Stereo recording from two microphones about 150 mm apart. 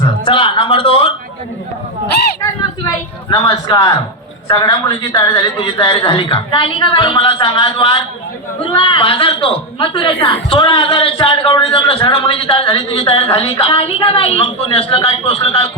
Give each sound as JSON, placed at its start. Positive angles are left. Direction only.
{"t": 0.0, "sound": "speech", "side_deg": 35}
{"t": 3.2, "sound": "a man's voice", "side_deg": 30}